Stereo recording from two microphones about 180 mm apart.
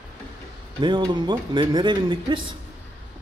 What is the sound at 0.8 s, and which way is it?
Speech, 25° right (ahead or behind).